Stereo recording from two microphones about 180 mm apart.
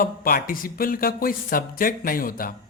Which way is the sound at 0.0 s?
55° left (ahead or behind).